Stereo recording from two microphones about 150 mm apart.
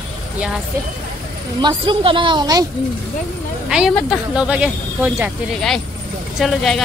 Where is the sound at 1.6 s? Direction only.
35° right (ahead or behind).